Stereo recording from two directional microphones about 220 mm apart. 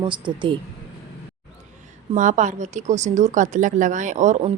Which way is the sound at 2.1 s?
35° right (ahead or behind).